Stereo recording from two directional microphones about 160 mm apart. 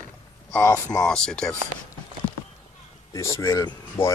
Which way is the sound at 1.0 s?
5° left (ahead or behind).